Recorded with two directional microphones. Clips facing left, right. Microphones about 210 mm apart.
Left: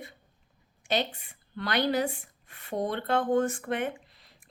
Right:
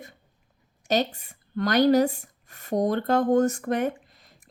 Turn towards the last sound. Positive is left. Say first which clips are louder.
# right 6 dB
turn(degrees=-45)  # may be behind; listen again after turning